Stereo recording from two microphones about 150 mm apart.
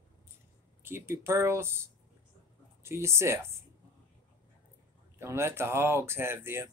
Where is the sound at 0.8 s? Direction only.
15° right (ahead or behind).